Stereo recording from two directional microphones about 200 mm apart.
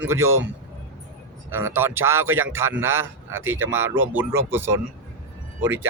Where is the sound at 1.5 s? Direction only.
10° right (ahead or behind).